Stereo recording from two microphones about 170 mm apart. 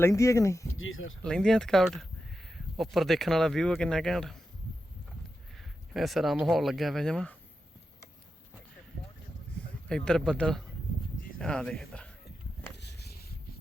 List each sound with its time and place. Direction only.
0.0 s speech: 15° left (ahead or behind)
1.2 s speech: 5° left (ahead or behind)
5.5 s speech: centre (ahead or behind)
9.9 s speech: 5° left (ahead or behind)
12.7 s a sound: 80° left